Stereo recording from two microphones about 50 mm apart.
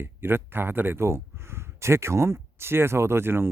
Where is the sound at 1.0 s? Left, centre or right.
Right.